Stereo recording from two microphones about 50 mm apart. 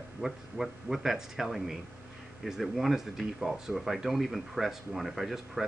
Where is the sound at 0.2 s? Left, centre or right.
Centre.